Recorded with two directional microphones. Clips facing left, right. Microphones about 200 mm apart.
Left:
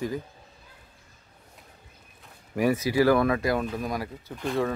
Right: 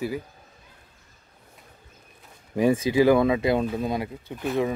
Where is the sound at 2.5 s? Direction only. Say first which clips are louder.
Right 3 dB; 25° right (ahead or behind).